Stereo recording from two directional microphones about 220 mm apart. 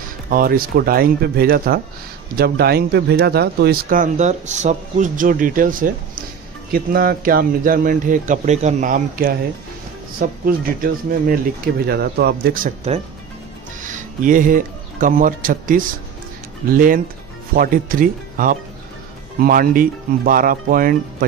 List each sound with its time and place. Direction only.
0.3 s a man's voice: 40° right (ahead or behind)